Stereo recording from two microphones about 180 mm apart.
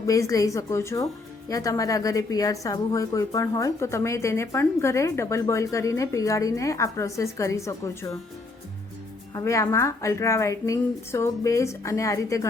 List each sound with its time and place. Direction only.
0.0 s a woman's voice: 20° left (ahead or behind)
9.3 s a woman's voice: 15° left (ahead or behind)